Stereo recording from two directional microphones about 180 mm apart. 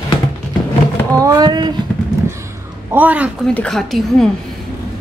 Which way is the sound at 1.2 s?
20° right (ahead or behind).